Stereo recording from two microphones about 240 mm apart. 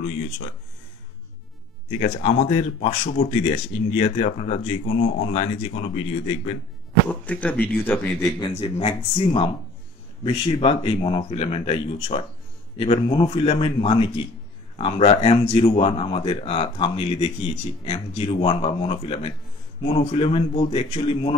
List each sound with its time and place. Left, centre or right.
2.0 s speech: left
7.1 s a man's voice: centre
8.4 s speech: left